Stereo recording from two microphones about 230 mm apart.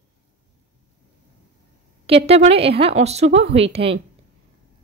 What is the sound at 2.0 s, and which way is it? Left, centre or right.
A woman's voice, right.